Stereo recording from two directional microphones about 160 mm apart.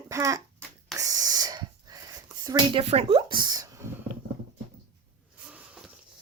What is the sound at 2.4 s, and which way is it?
Speech, 35° right (ahead or behind).